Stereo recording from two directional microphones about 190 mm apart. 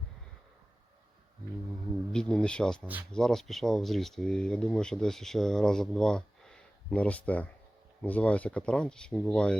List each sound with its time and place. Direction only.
2.1 s speech: 5° left (ahead or behind)